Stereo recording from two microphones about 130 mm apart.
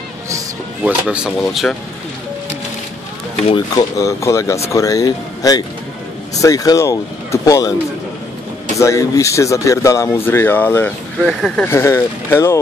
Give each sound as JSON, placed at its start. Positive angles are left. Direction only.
{"t": 0.8, "sound": "speech", "side_deg": -5}
{"t": 3.7, "sound": "speech", "side_deg": 25}
{"t": 8.7, "sound": "speech", "side_deg": 25}
{"t": 11.2, "sound": "speech", "side_deg": 0}
{"t": 11.6, "sound": "speech", "side_deg": 20}